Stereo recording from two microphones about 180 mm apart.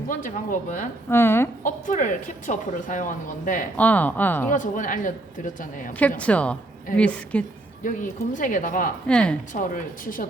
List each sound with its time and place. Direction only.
0.1 s a woman's voice: 45° left (ahead or behind)
1.1 s speech: 15° left (ahead or behind)
1.6 s a woman's voice: 45° left (ahead or behind)
3.8 s speech: 10° left (ahead or behind)
4.4 s a woman's voice: 45° left (ahead or behind)
6.0 s speech: 10° left (ahead or behind)
7.9 s a woman's voice: 45° left (ahead or behind)
9.0 s speech: 5° left (ahead or behind)
9.5 s a woman's voice: 45° left (ahead or behind)